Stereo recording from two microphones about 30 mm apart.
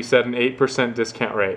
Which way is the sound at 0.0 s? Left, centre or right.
Centre.